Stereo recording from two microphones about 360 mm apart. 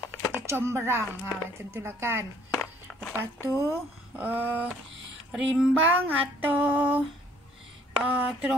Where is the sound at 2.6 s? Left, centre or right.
Centre.